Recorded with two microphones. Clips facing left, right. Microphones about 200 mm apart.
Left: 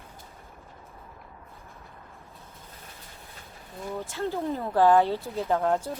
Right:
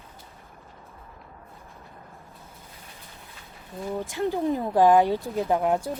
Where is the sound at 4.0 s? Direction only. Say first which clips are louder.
Right 4 dB; 15° right (ahead or behind).